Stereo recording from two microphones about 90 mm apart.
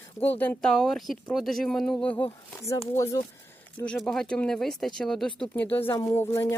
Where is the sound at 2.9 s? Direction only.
30° left (ahead or behind).